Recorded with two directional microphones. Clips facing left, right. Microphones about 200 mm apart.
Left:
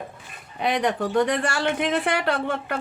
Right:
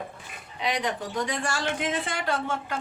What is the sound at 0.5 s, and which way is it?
A woman's voice, 55° left (ahead or behind).